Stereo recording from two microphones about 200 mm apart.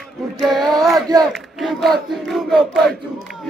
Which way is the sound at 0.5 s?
Centre (ahead or behind).